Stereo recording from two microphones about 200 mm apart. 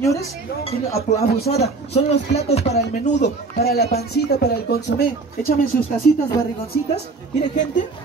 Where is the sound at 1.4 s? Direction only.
30° left (ahead or behind).